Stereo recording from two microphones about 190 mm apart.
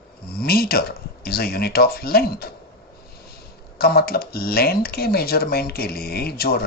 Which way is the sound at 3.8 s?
55° left (ahead or behind).